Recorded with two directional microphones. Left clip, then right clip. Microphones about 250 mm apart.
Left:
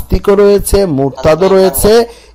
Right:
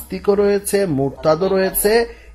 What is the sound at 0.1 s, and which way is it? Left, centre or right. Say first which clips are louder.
Speech: left 8 dB; left.